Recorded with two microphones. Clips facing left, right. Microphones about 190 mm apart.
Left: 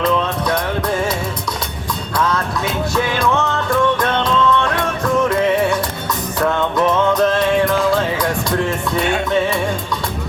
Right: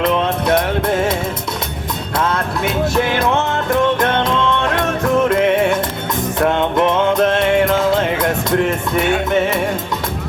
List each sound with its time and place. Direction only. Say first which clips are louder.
0.0 s music: right 1 dB; 25° right (ahead or behind)
3.1 s music: right 1 dB; 20° right (ahead or behind)
6.5 s music: even; 25° right (ahead or behind)